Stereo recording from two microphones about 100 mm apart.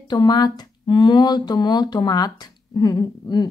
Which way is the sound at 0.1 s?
45° left (ahead or behind).